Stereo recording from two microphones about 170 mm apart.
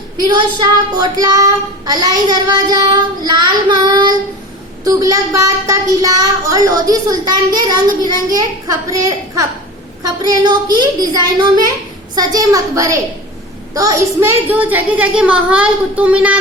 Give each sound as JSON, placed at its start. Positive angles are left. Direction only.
{"t": 0.3, "sound": "a child's voice", "side_deg": -25}